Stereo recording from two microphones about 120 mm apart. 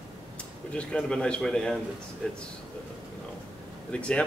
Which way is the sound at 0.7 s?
5° left (ahead or behind).